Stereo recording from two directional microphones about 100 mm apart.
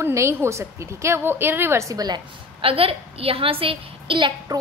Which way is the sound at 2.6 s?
65° right (ahead or behind).